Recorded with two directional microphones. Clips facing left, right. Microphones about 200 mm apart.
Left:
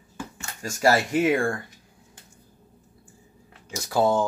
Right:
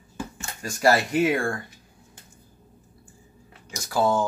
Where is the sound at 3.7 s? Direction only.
20° left (ahead or behind).